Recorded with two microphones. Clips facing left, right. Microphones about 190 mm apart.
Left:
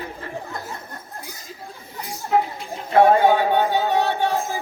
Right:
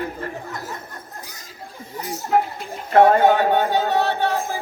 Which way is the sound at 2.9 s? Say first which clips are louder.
Right 1 dB; 50° right (ahead or behind).